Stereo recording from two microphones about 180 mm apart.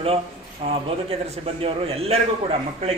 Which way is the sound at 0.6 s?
35° right (ahead or behind).